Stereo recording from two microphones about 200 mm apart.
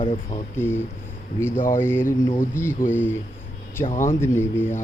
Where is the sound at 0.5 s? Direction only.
10° left (ahead or behind).